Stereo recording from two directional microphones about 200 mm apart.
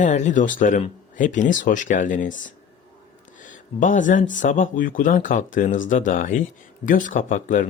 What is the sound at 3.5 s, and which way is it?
Speech, 40° left (ahead or behind).